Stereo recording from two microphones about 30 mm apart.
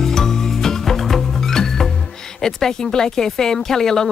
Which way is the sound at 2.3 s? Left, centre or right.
Centre.